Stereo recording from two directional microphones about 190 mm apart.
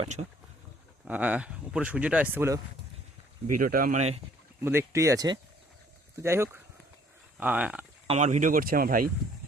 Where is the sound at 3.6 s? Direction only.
50° right (ahead or behind).